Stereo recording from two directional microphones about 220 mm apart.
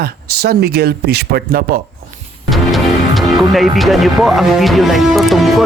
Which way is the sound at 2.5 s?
Centre (ahead or behind).